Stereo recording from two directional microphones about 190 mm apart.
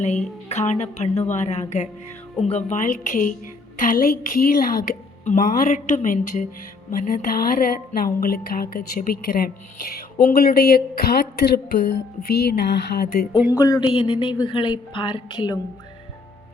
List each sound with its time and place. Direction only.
0.4 s a woman's voice: 35° left (ahead or behind); by 13.2 s 60° left (ahead or behind)
13.5 s a woman's voice: 20° left (ahead or behind)